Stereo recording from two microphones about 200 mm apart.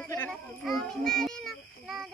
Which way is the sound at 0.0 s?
5° left (ahead or behind).